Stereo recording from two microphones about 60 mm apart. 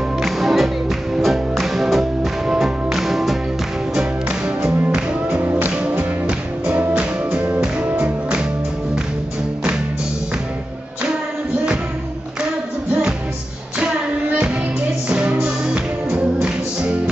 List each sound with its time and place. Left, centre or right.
0.2 s music: centre
4.6 s music: centre
5.4 s music: right
5.8 s music: centre
15.0 s music: centre